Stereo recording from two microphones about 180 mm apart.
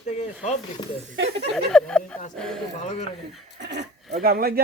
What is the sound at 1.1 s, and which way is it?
Speech, 70° right (ahead or behind).